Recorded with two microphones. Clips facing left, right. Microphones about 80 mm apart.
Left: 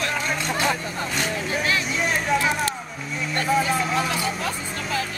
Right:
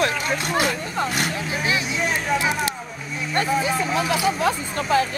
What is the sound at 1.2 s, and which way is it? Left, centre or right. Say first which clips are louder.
Speech: even; centre.